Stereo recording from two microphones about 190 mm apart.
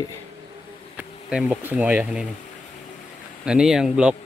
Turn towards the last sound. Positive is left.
turn(degrees=-5)  # may be behind; listen again after turning